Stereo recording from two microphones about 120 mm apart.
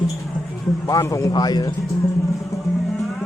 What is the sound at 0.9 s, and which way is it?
Speech, 25° left (ahead or behind).